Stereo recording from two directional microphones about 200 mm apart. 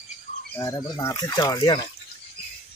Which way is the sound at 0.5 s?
15° left (ahead or behind).